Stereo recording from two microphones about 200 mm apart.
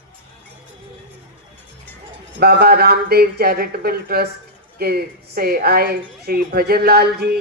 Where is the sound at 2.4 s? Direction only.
50° right (ahead or behind).